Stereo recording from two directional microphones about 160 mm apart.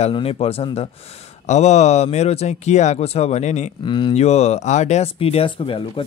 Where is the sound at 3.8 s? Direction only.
30° left (ahead or behind).